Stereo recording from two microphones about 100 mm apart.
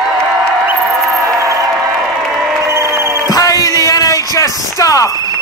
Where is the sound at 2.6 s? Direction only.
30° right (ahead or behind).